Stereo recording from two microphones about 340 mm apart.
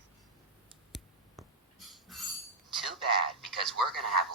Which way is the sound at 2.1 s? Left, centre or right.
Centre.